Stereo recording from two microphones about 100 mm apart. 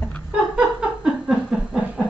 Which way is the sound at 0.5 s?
5° right (ahead or behind).